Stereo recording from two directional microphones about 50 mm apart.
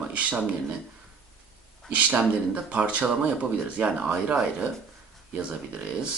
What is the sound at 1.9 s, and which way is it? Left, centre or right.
Speech, right.